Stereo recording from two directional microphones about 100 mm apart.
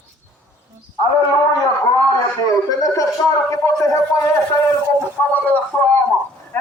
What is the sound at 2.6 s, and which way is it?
A man's voice, 35° left (ahead or behind).